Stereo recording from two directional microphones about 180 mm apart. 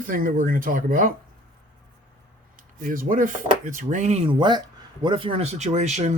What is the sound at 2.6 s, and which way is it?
Speech, 50° right (ahead or behind).